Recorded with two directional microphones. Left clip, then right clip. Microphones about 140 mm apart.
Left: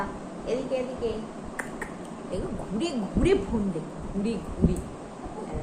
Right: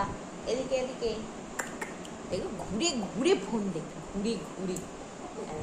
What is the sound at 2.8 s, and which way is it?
Speech, 20° right (ahead or behind).